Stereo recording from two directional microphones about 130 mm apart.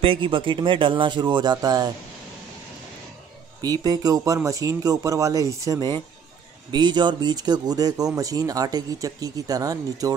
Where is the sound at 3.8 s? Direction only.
30° right (ahead or behind).